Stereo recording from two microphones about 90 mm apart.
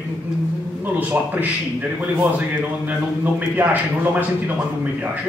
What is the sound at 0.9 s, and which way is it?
A man's voice, 20° right (ahead or behind).